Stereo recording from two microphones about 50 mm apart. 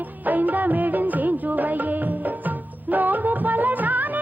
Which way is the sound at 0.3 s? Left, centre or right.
Right.